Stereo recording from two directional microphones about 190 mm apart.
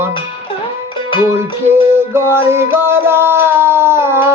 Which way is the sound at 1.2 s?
10° right (ahead or behind).